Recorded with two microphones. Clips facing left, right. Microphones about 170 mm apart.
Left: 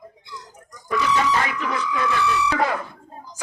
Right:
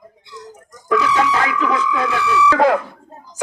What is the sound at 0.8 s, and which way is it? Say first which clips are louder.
Speech: right 4 dB; 80° right.